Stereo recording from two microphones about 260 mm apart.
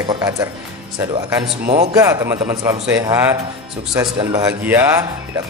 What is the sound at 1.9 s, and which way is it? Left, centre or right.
A man's voice, centre.